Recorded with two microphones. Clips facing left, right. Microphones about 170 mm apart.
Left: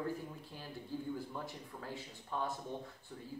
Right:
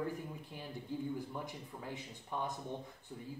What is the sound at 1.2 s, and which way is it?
Speech, 15° right (ahead or behind).